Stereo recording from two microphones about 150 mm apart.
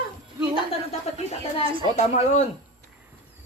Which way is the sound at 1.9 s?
55° left (ahead or behind).